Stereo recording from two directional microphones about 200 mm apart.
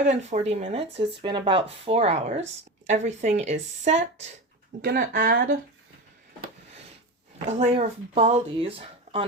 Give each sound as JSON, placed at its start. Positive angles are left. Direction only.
{"t": 0.0, "sound": "speech", "side_deg": -35}
{"t": 4.8, "sound": "speech", "side_deg": -45}
{"t": 7.3, "sound": "speech", "side_deg": -30}